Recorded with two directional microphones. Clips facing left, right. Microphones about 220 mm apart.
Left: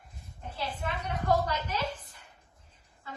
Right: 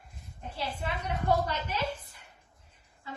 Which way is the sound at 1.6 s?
10° right (ahead or behind).